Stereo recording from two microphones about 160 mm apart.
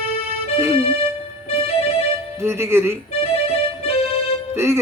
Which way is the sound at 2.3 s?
15° right (ahead or behind).